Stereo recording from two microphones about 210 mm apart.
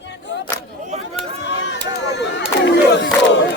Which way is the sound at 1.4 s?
60° left (ahead or behind).